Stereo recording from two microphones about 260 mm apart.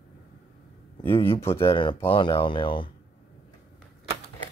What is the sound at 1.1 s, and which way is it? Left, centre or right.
Speech, centre.